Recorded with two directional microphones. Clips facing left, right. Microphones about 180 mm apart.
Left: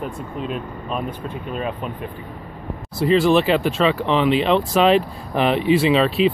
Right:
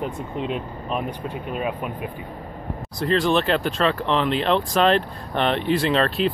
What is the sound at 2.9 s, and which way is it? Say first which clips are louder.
Speech: left 5 dB; 5° left (ahead or behind).